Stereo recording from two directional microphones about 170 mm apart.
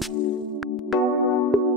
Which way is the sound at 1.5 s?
Centre (ahead or behind).